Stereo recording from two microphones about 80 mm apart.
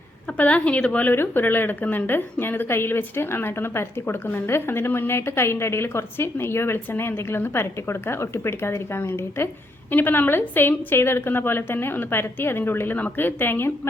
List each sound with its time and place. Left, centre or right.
0.3 s a woman's voice: centre
1.1 s a woman's voice: left